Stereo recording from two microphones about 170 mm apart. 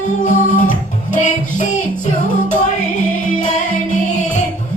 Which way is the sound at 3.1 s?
50° left (ahead or behind).